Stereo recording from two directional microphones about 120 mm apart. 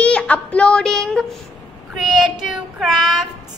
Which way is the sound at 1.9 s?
Centre (ahead or behind).